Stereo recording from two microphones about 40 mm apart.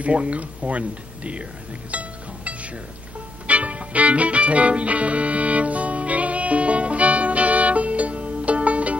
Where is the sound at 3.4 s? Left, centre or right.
Right.